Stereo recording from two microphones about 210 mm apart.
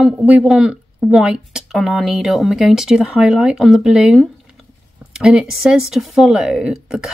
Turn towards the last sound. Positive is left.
turn(degrees=-5)  # may be behind; listen again after turning